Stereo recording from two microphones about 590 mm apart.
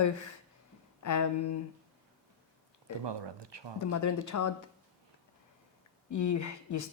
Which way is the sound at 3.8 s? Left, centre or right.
Left.